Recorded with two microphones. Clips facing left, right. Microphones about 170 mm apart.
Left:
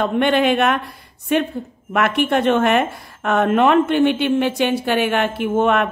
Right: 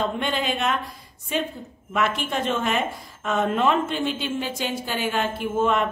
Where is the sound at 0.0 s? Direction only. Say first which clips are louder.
Left 9 dB; 65° left (ahead or behind).